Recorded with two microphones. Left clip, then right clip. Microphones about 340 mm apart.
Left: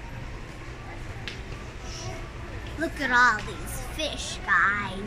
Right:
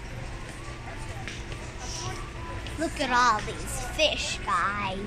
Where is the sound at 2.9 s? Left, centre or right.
Centre.